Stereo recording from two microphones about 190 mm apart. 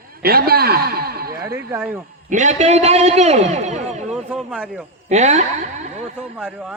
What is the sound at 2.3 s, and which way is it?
A man's voice, 40° right (ahead or behind).